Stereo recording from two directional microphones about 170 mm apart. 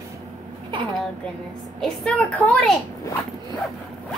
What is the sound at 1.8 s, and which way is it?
A woman's voice, 5° left (ahead or behind).